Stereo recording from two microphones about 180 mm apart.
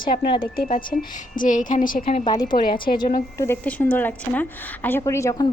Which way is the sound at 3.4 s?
10° left (ahead or behind).